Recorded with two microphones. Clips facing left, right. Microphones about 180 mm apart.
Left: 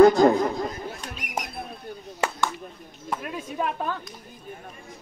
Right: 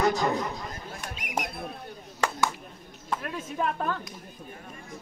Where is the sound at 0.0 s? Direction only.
55° left (ahead or behind).